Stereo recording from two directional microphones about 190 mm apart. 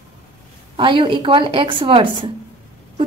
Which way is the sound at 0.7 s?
25° right (ahead or behind).